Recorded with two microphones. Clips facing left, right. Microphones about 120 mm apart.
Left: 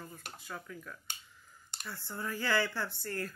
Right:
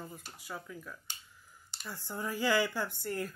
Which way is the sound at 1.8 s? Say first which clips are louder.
Right 2 dB; 15° right (ahead or behind).